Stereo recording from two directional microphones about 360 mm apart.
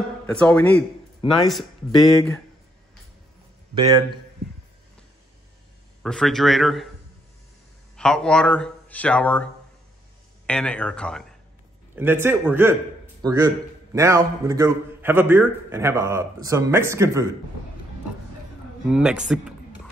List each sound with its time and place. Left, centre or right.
0.3 s speech: centre
6.0 s speech: centre
7.9 s a man's voice: centre
18.9 s speech: centre